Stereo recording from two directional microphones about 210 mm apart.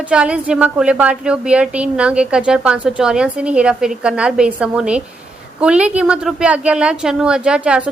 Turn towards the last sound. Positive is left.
turn(degrees=-5)  # may be behind; listen again after turning